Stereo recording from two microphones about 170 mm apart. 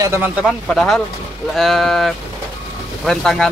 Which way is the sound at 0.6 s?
5° left (ahead or behind).